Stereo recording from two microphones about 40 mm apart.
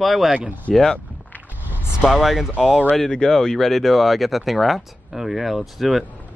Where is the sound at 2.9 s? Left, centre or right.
Centre.